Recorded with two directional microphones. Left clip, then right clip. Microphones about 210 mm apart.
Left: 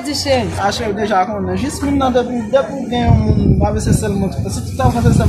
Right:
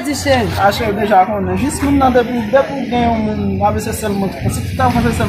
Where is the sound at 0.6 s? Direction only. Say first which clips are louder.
Right 3 dB; centre (ahead or behind).